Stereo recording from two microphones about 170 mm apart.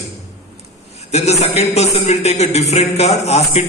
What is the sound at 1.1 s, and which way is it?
Speech, 40° left (ahead or behind).